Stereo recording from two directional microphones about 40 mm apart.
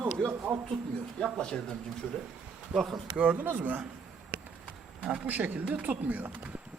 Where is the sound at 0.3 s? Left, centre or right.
Right.